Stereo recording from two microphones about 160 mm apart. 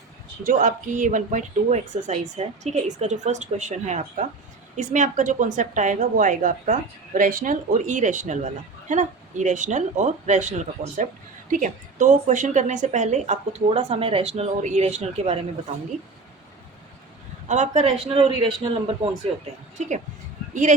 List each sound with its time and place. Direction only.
0.4 s a woman's voice: 55° right (ahead or behind)
17.5 s a man's voice: 45° right (ahead or behind)
20.5 s speech: 50° right (ahead or behind)